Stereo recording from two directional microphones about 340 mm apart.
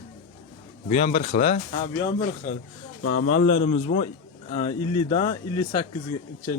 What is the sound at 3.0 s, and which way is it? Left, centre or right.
Speech, left.